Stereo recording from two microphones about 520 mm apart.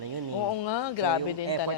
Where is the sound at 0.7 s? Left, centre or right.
Left.